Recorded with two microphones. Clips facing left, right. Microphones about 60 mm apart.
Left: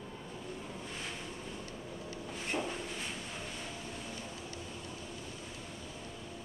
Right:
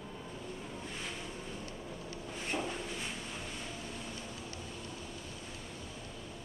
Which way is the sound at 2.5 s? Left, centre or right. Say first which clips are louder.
Left 1 dB; centre.